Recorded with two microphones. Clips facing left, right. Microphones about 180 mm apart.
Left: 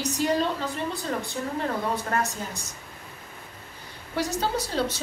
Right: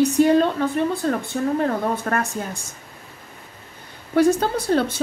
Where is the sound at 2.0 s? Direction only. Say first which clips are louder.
Right 4 dB; 55° right (ahead or behind).